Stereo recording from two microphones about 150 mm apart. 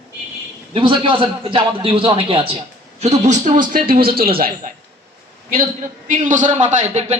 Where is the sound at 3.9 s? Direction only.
85° right.